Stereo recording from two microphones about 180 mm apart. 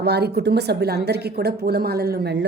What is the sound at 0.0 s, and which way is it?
A woman's voice, 65° right (ahead or behind).